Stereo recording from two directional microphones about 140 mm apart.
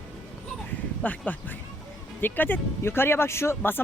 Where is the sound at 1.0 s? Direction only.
10° left (ahead or behind).